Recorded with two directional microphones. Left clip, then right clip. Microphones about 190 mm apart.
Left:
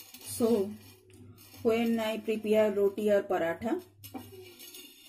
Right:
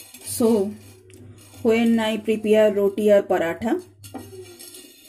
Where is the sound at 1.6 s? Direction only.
20° right (ahead or behind).